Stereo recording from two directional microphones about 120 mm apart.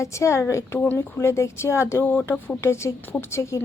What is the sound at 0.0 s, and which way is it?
Speech, 25° left (ahead or behind).